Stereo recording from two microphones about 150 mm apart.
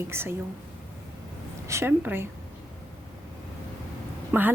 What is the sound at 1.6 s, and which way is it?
Speech, 15° right (ahead or behind).